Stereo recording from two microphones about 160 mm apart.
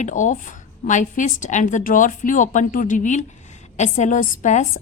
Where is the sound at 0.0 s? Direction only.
50° left (ahead or behind).